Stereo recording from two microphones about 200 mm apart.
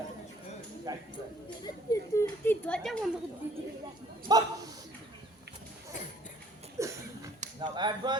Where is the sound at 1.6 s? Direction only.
15° left (ahead or behind).